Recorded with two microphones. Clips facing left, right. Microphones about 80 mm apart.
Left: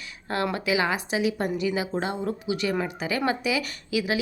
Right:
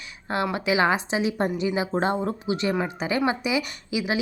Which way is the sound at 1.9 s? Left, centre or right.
Right.